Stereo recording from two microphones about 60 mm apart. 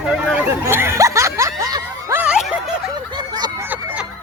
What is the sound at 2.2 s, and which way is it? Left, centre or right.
Snicker, centre.